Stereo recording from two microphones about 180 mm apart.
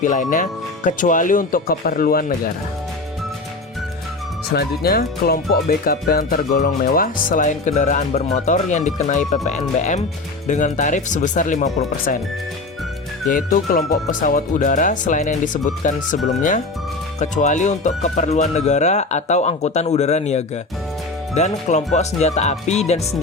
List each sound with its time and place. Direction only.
0.0 s speech: 45° left (ahead or behind)
4.5 s speech: 60° left (ahead or behind)
13.2 s speech: 50° left (ahead or behind)